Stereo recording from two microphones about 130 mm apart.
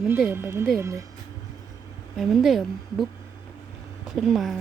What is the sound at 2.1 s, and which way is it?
Speech, centre (ahead or behind).